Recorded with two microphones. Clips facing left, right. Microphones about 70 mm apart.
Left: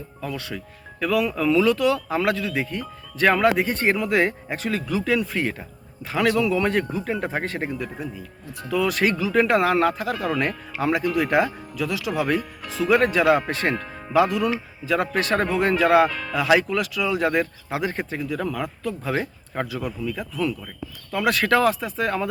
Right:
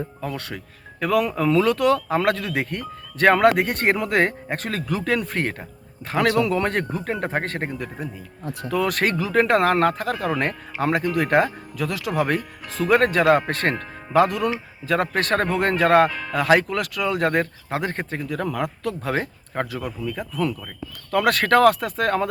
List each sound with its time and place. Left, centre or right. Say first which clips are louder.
0.3 s speech: even; right
16.0 s speech: right 1 dB; centre
16.3 s speech: right 1 dB; right
18.8 s speech: right 1 dB; right
19.2 s speech: right 1 dB; right
21.1 s speech: right 2 dB; right